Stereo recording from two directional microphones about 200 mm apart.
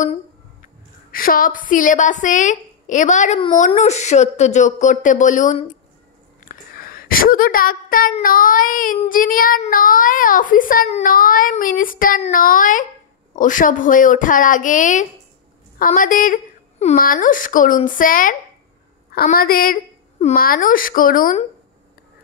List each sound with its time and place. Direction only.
1.1 s a woman's voice: 45° left (ahead or behind)